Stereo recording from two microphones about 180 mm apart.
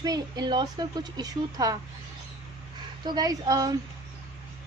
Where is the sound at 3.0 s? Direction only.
25° right (ahead or behind).